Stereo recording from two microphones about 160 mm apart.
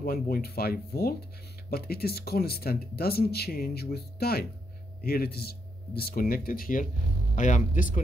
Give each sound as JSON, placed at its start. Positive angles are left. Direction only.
{"t": 0.0, "sound": "speech", "side_deg": 70}